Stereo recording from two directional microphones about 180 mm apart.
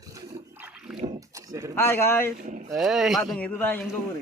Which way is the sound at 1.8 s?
15° left (ahead or behind).